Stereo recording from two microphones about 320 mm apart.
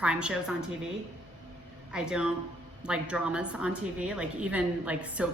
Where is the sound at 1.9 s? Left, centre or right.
Centre.